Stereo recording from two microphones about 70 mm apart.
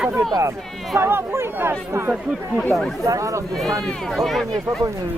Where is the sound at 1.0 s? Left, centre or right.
Right.